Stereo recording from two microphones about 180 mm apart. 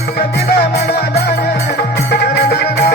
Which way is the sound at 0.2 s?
65° left (ahead or behind).